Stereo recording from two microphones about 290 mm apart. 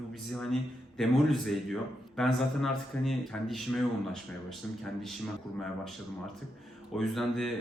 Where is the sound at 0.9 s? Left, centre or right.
Centre.